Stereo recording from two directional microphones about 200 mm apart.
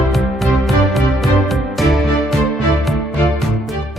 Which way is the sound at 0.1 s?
Centre (ahead or behind).